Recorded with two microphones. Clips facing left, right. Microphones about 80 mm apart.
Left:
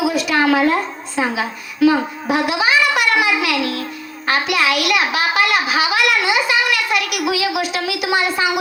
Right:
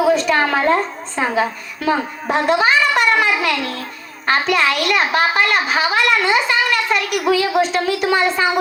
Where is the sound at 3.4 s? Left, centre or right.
Right.